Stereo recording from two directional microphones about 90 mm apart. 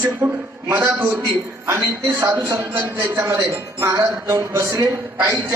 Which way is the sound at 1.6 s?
30° right (ahead or behind).